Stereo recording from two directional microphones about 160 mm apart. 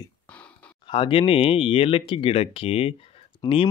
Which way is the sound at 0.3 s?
10° left (ahead or behind).